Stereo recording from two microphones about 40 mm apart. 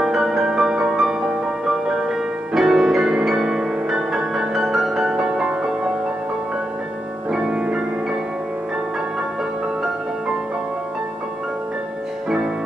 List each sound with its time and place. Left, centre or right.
0.0 s music: centre
7.2 s music: centre